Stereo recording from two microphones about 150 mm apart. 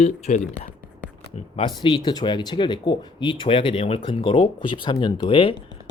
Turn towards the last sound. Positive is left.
turn(degrees=35)  # may be behind; listen again after turning